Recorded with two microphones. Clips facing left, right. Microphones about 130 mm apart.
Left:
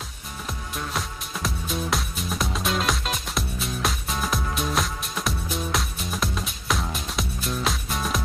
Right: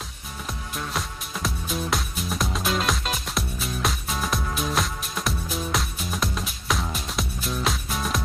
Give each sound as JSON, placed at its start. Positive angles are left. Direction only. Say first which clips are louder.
{"t": 0.7, "sound": "music", "louder": "even", "side_deg": 0}